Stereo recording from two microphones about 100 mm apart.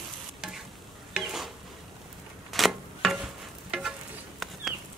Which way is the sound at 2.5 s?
Centre (ahead or behind).